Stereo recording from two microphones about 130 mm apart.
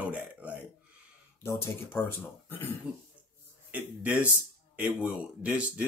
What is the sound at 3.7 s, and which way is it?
Speech, 10° right (ahead or behind).